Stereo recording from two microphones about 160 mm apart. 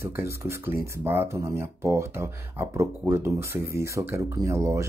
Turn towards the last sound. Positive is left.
turn(degrees=-20)  # may be behind; listen again after turning